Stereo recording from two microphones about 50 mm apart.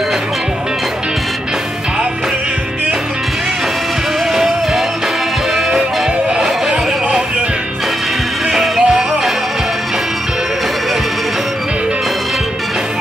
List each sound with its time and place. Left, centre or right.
4.3 s music: centre
8.5 s music: centre